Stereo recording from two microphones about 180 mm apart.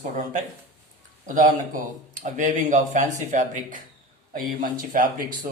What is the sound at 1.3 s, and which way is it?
Speech, 45° right (ahead or behind).